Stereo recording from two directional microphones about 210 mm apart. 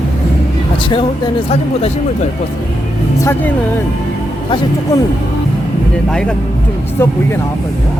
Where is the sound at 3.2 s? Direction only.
10° left (ahead or behind).